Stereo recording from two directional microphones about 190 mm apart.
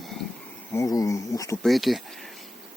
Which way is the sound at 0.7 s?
15° left (ahead or behind).